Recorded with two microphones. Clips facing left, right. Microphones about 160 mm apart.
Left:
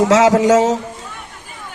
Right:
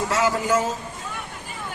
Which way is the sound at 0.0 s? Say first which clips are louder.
Left 11 dB; 90° left.